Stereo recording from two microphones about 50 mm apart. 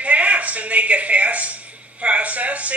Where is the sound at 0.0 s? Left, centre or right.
Right.